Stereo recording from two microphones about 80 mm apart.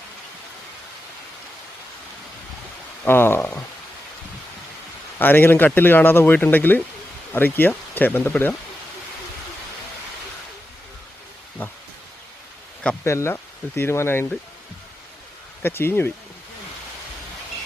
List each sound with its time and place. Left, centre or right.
3.0 s speech: left
5.2 s speech: left
11.6 s a sound: left
13.1 s speech: left
15.6 s speech: left